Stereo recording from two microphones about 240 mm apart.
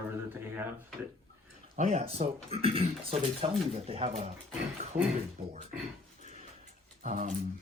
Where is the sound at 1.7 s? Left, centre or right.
Right.